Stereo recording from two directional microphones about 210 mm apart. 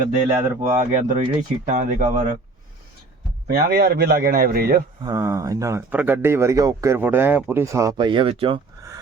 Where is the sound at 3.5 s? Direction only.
50° right (ahead or behind).